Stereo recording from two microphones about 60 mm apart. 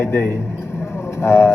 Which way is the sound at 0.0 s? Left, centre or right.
Left.